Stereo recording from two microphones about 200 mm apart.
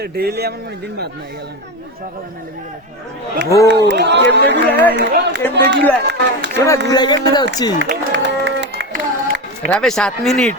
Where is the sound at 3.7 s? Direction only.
60° right (ahead or behind).